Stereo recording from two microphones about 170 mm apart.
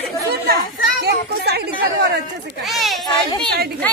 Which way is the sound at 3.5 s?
70° right (ahead or behind).